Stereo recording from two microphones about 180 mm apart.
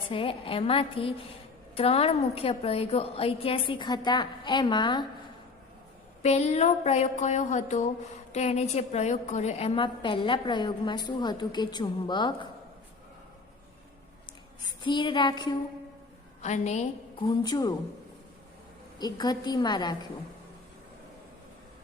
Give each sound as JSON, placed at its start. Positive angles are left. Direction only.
{"t": 0.1, "sound": "a woman's voice", "side_deg": 30}
{"t": 1.7, "sound": "a sound", "side_deg": 30}
{"t": 6.2, "sound": "a sound", "side_deg": 40}
{"t": 14.8, "sound": "a woman's voice", "side_deg": 25}
{"t": 16.4, "sound": "a woman's voice", "side_deg": 40}
{"t": 17.2, "sound": "a woman's voice", "side_deg": 20}
{"t": 18.9, "sound": "a woman's voice", "side_deg": 20}